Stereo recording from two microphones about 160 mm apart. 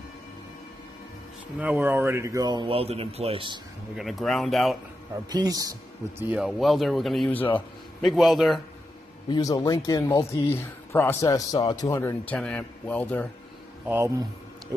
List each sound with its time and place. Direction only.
1.6 s a man's voice: 10° right (ahead or behind); by 3.6 s 30° right (ahead or behind)
3.9 s speech: centre (ahead or behind)
5.3 s a man's voice: 25° right (ahead or behind)
6.1 s speech: 10° right (ahead or behind)
9.3 s a man's voice: 20° left (ahead or behind)
13.8 s speech: 15° right (ahead or behind)